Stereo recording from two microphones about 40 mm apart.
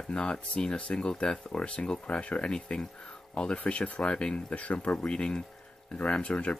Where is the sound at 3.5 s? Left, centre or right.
Left.